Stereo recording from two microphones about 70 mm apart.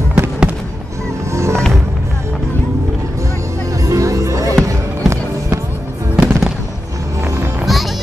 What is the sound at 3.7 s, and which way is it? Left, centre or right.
Music, right.